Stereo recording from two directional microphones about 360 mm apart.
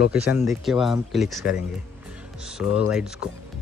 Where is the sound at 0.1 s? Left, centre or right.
Centre.